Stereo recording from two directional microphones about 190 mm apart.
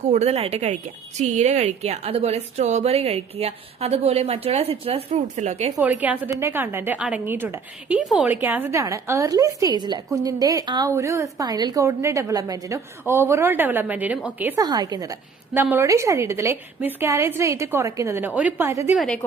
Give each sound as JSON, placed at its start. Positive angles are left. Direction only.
{"t": 0.1, "sound": "a woman's voice", "side_deg": -35}
{"t": 5.8, "sound": "a woman's voice", "side_deg": -10}
{"t": 14.6, "sound": "a woman's voice", "side_deg": -20}
{"t": 18.9, "sound": "a woman's voice", "side_deg": 5}